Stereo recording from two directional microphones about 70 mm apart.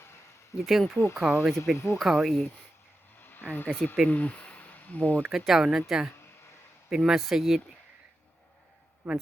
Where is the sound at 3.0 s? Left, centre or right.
Left.